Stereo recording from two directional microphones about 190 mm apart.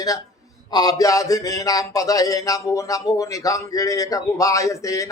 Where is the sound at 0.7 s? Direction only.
20° left (ahead or behind).